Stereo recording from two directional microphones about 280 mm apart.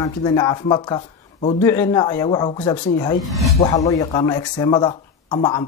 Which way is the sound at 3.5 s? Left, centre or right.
Centre.